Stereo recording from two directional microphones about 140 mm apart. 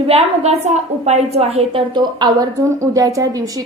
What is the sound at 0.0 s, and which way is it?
A woman's voice, 45° right (ahead or behind).